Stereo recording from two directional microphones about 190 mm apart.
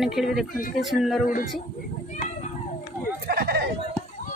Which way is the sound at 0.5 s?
45° left (ahead or behind).